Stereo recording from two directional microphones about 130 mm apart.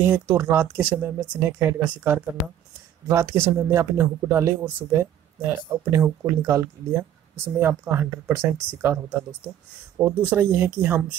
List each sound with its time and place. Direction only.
0.0 s speech: 15° right (ahead or behind)
3.1 s speech: 20° right (ahead or behind)